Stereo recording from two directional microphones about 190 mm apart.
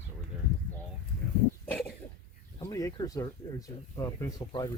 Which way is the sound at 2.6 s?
20° left (ahead or behind).